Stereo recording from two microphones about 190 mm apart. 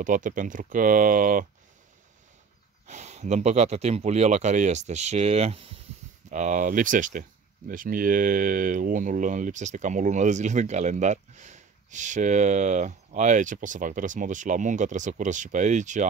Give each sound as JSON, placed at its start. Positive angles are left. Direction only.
{"t": 0.0, "sound": "speech", "side_deg": -45}
{"t": 2.9, "sound": "speech", "side_deg": -35}